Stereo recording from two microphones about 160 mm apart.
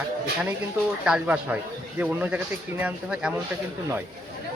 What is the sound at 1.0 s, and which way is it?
Speech, 5° right (ahead or behind).